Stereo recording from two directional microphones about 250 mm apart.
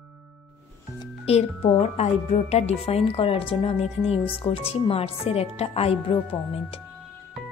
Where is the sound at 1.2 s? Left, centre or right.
Left.